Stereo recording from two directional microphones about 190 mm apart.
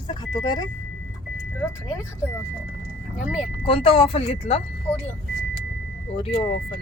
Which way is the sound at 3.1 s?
5° right (ahead or behind).